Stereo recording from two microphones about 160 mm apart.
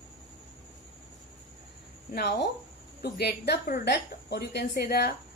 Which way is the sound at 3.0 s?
90° left.